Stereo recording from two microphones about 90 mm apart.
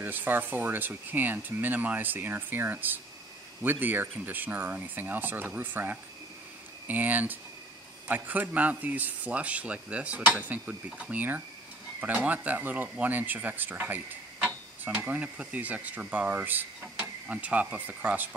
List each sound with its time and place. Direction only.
0.0 s speech: 20° right (ahead or behind)